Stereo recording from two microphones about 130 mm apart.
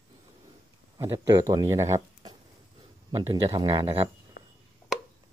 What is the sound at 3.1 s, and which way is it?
Speech, 45° right (ahead or behind).